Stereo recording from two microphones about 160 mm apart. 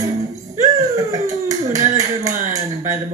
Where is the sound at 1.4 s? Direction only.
20° right (ahead or behind).